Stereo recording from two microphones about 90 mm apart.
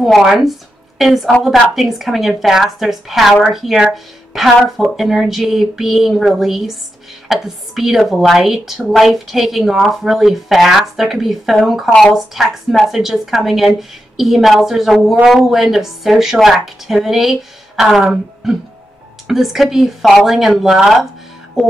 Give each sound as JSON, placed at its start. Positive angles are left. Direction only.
{"t": 0.0, "sound": "a woman's voice", "side_deg": 0}